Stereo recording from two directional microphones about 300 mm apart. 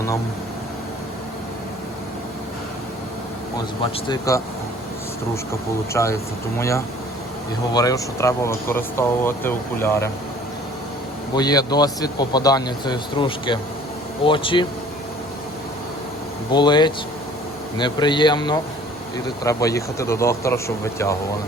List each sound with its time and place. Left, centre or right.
4.1 s speech: centre
5.9 s speech: centre
11.3 s speech: centre
16.5 s speech: centre